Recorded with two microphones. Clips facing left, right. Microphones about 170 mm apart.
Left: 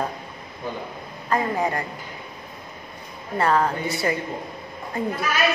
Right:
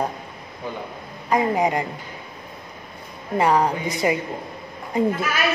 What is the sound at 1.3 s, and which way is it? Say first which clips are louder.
Speech: right 3 dB; 15° right (ahead or behind).